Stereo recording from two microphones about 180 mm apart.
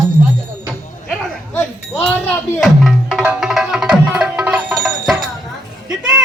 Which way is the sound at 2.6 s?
Centre (ahead or behind).